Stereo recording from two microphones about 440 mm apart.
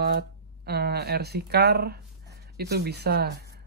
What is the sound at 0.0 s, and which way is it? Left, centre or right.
Speech, right.